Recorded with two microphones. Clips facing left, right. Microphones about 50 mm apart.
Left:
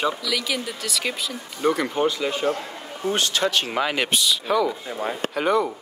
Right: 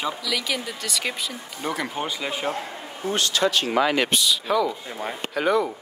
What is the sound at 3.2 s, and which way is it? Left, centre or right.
Speech, left.